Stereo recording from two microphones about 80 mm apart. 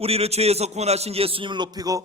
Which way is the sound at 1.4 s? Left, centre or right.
Right.